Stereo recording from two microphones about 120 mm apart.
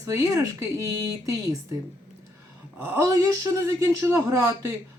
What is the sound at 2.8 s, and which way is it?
Speech, 20° right (ahead or behind).